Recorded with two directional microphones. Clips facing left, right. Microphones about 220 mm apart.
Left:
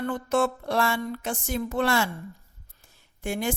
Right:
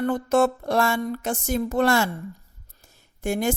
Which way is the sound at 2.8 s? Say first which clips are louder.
Right 5 dB; 45° right (ahead or behind).